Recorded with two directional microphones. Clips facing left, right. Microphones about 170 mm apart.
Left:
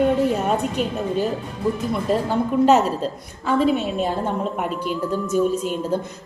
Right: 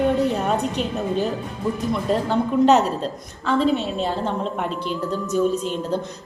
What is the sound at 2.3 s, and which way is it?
A woman's voice, 5° left (ahead or behind).